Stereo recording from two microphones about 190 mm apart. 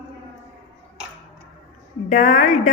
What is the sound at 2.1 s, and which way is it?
Speech, 40° left (ahead or behind).